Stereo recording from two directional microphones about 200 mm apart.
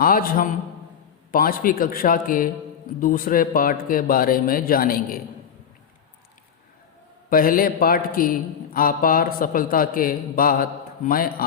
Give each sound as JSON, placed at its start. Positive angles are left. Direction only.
{"t": 0.0, "sound": "a man's voice", "side_deg": 45}
{"t": 7.3, "sound": "a man's voice", "side_deg": 45}